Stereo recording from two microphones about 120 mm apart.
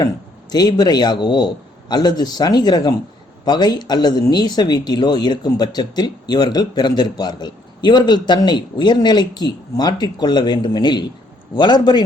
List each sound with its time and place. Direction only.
0.5 s speech: 35° left (ahead or behind)